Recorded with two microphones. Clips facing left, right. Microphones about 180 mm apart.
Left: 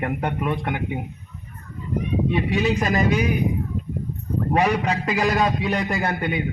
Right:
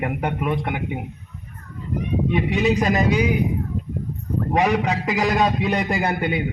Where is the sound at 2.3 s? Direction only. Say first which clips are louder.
Right 3 dB; 15° right (ahead or behind).